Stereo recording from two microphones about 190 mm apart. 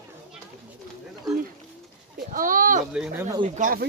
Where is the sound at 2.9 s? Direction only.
5° right (ahead or behind).